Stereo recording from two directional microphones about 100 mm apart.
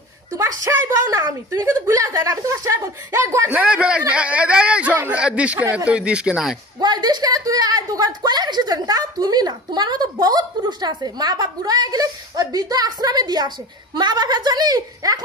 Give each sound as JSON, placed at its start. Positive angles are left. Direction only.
{"t": 0.4, "sound": "a woman's voice", "side_deg": -30}
{"t": 3.5, "sound": "speech", "side_deg": -10}
{"t": 6.8, "sound": "a woman's voice", "side_deg": -45}